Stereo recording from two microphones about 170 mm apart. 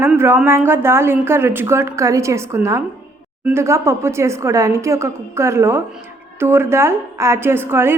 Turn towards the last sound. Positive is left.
turn(degrees=-15)  # may be behind; listen again after turning